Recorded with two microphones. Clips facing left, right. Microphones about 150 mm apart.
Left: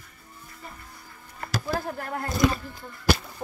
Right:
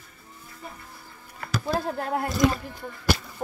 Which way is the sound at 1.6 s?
20° right (ahead or behind).